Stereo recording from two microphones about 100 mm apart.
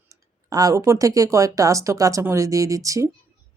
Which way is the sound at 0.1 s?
35° right (ahead or behind).